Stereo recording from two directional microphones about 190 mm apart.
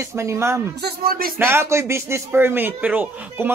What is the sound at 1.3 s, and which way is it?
A man's voice, 15° right (ahead or behind).